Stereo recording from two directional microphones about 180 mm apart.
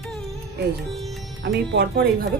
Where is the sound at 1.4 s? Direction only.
70° right (ahead or behind).